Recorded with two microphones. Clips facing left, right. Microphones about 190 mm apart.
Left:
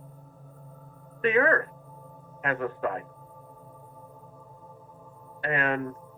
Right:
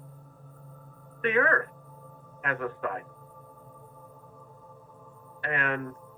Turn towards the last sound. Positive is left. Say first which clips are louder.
# left 3 dB
turn(degrees=25)  # may be behind; listen again after turning